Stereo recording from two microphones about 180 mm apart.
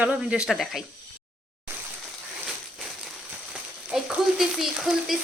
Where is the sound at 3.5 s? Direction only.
5° right (ahead or behind).